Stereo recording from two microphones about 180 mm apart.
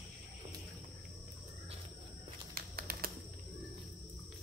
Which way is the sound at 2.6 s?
55° right (ahead or behind).